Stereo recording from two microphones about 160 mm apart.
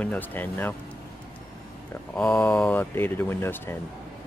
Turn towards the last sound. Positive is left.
turn(degrees=15)  # may be behind; listen again after turning